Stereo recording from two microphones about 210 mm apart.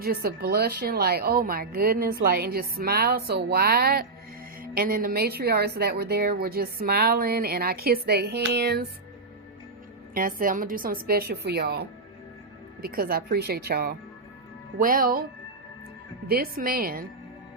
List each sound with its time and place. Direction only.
0.0 s a woman's voice: 45° right (ahead or behind)
10.2 s a woman's voice: 40° right (ahead or behind)
16.2 s a woman's voice: 45° right (ahead or behind)